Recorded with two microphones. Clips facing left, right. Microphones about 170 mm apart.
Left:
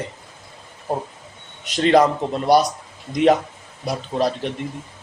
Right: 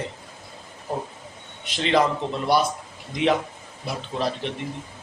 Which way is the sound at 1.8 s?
45° left (ahead or behind).